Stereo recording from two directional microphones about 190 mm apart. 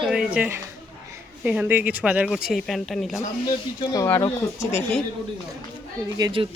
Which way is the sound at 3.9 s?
15° left (ahead or behind).